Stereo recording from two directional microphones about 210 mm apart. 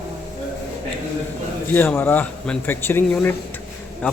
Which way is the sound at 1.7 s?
10° left (ahead or behind).